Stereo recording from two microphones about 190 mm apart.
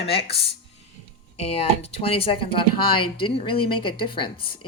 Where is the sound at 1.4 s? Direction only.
35° left (ahead or behind).